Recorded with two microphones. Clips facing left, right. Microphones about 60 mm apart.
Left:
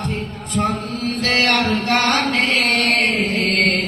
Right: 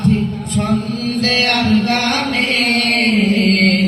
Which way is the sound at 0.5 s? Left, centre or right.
Left.